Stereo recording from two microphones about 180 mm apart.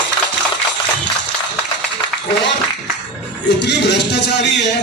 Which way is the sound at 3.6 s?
70° left (ahead or behind).